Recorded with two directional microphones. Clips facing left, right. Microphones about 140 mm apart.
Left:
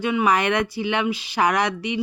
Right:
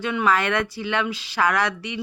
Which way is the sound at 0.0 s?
10° left (ahead or behind).